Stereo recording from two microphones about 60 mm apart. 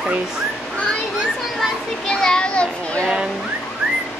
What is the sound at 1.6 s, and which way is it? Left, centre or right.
A child's voice, centre.